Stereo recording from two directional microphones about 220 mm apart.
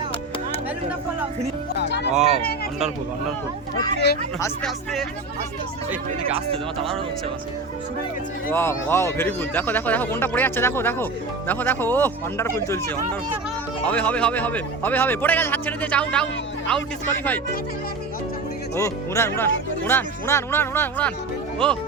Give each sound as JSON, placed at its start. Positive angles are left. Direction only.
{"t": 1.7, "sound": "speech", "side_deg": 50}
{"t": 2.1, "sound": "speech", "side_deg": -30}
{"t": 4.6, "sound": "speech", "side_deg": 0}
{"t": 6.3, "sound": "speech", "side_deg": -25}
{"t": 8.4, "sound": "speech", "side_deg": 10}
{"t": 13.8, "sound": "speech", "side_deg": 5}
{"t": 18.8, "sound": "speech", "side_deg": 10}